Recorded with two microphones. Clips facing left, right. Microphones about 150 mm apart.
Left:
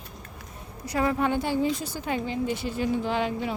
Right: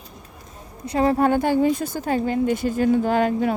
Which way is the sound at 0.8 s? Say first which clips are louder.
Right 6 dB; 30° right (ahead or behind).